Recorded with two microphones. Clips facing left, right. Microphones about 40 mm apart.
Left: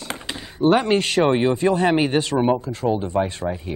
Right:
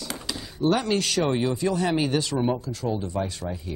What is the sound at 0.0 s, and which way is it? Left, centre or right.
Speech, left.